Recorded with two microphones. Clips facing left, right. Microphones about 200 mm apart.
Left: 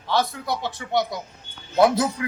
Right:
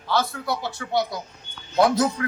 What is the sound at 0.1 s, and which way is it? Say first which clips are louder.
A man's voice: left 1 dB; 20° left (ahead or behind).